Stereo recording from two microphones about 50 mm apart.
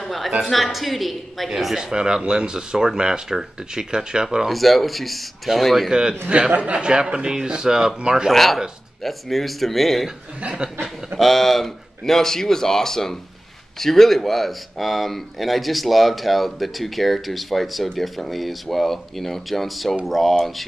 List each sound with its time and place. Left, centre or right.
0.0 s a sound: centre
0.5 s a woman's voice: centre
4.5 s speech: centre
6.2 s a man's voice: right
8.3 s speech: centre
10.6 s a man's voice: centre
11.1 s a man's voice: centre